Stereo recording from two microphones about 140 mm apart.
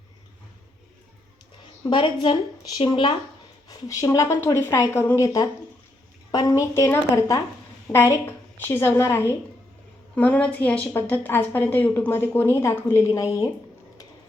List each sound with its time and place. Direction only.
1.9 s speech: 35° left (ahead or behind)
3.7 s a woman's voice: 25° left (ahead or behind)